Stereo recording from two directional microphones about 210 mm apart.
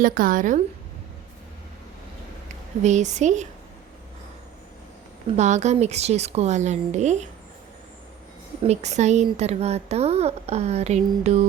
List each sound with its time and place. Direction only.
0.0 s speech: 40° right (ahead or behind)
2.8 s speech: 35° right (ahead or behind)
5.4 s speech: 35° right (ahead or behind)
8.6 s speech: 30° right (ahead or behind)